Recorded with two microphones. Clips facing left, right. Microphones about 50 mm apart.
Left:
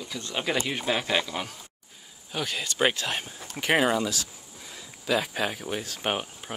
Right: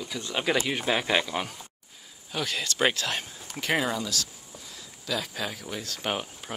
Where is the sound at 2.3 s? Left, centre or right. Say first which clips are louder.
Even; centre.